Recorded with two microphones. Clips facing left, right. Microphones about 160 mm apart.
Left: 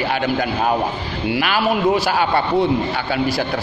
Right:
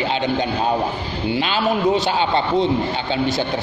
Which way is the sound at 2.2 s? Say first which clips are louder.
Left 1 dB; 25° right (ahead or behind).